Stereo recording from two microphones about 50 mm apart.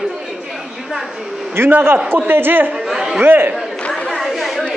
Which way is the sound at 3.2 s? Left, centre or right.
Right.